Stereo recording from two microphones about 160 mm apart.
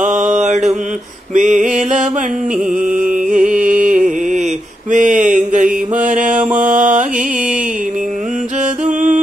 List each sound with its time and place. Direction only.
0.0 s mantra: 50° right (ahead or behind)
1.3 s a sound: 50° right (ahead or behind)
2.9 s music: 5° right (ahead or behind)
3.3 s music: 50° right (ahead or behind)
4.9 s mantra: 55° right (ahead or behind)
8.8 s music: 50° right (ahead or behind)